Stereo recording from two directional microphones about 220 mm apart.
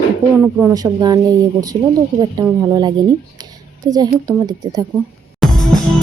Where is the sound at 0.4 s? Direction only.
10° right (ahead or behind).